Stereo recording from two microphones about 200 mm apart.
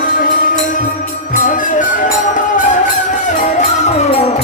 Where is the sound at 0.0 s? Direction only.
45° left (ahead or behind).